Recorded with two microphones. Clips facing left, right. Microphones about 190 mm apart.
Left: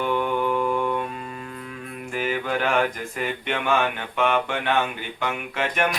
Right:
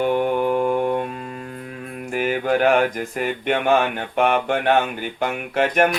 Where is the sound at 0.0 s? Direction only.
45° right (ahead or behind).